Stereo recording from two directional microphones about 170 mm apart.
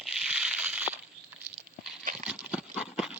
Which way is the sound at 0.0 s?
5° right (ahead or behind).